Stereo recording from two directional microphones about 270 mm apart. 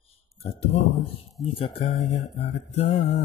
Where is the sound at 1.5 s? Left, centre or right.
Centre.